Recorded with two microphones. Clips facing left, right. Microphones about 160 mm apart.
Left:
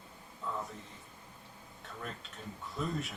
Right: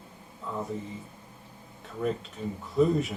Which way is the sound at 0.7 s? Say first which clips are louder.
Right 13 dB; centre (ahead or behind).